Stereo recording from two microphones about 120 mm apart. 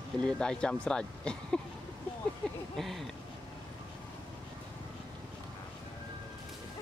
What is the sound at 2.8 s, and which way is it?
Speech, centre (ahead or behind).